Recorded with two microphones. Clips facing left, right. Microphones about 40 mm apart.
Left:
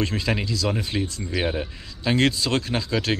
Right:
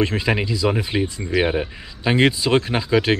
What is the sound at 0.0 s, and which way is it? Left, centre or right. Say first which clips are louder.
Speech: right 5 dB; right.